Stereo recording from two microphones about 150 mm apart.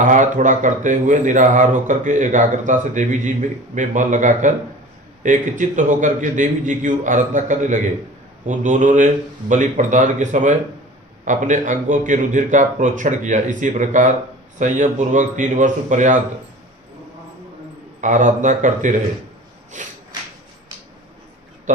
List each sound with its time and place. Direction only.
0.0 s speech: 55° right (ahead or behind)
18.0 s speech: 55° right (ahead or behind)
19.7 s a sound: 55° right (ahead or behind)